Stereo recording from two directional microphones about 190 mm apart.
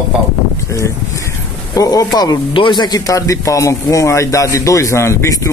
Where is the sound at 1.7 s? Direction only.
20° left (ahead or behind).